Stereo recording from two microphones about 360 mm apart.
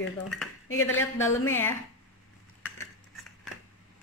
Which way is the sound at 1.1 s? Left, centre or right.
Centre.